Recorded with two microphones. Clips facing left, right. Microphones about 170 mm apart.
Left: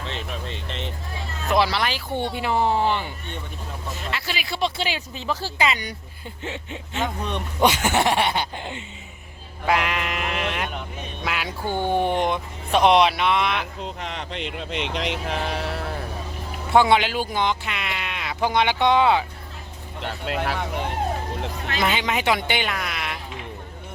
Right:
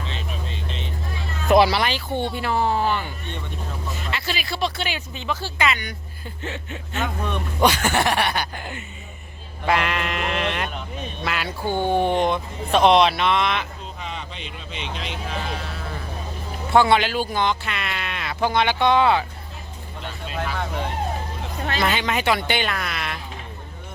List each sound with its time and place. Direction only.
0.4 s vehicle: 65° left (ahead or behind)
1.5 s speech: 15° right (ahead or behind)
2.3 s speech: 15° left (ahead or behind)
4.1 s speech: 15° left (ahead or behind); by 5.9 s 35° left (ahead or behind)
6.4 s speech: 20° left (ahead or behind)
9.6 s speech: 10° left (ahead or behind)
11.6 s speech: 15° right (ahead or behind)
11.9 s speech: 15° left (ahead or behind)
13.8 s speech: 70° left (ahead or behind)
16.7 s speech: 15° left (ahead or behind)
20.0 s speech: 70° left (ahead or behind)
21.8 s speech: 15° left (ahead or behind)